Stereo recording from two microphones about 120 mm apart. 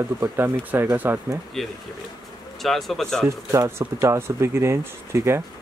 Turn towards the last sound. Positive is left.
turn(degrees=-20)  # may be behind; listen again after turning